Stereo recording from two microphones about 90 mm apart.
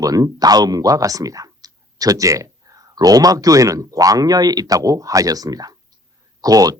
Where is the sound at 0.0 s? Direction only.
40° right (ahead or behind).